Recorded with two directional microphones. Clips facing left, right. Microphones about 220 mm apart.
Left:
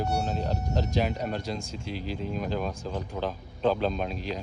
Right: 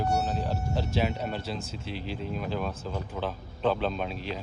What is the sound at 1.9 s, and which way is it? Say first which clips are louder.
Speech: left 2 dB; 40° left (ahead or behind).